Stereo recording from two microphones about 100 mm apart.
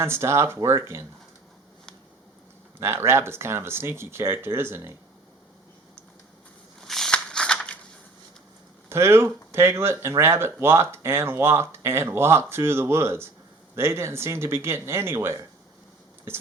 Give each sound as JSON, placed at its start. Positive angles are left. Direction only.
{"t": 0.0, "sound": "speech", "side_deg": -25}
{"t": 2.7, "sound": "speech", "side_deg": -25}
{"t": 6.8, "sound": "a sound", "side_deg": 5}
{"t": 8.9, "sound": "speech", "side_deg": -25}